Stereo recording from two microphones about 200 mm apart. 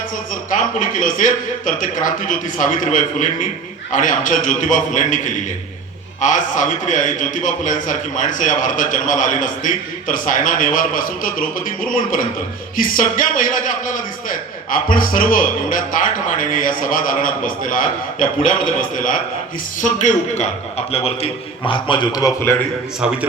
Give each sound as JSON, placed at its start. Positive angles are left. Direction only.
{"t": 0.5, "sound": "a man's voice", "side_deg": 40}